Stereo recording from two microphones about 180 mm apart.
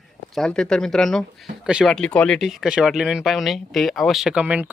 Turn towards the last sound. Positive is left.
turn(degrees=-10)  # may be behind; listen again after turning